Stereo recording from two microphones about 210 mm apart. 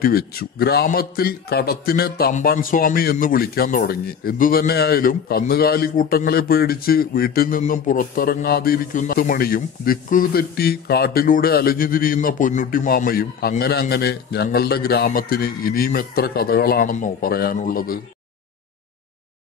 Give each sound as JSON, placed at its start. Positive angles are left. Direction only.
{"t": 0.0, "sound": "a man's voice", "side_deg": 45}